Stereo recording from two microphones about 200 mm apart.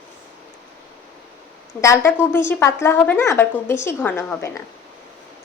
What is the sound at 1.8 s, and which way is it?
A woman's voice, 10° left (ahead or behind).